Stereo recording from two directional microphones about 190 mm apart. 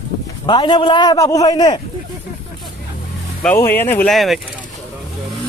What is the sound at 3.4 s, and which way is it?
Speech, 10° left (ahead or behind).